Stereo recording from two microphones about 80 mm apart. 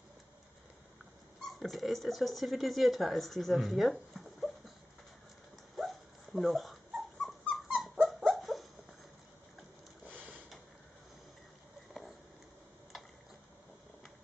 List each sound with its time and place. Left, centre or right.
1.6 s speech: centre
5.8 s dog: centre
10.0 s a sound: right